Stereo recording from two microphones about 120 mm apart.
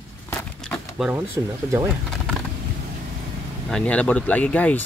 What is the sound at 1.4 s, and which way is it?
Speech, 25° right (ahead or behind).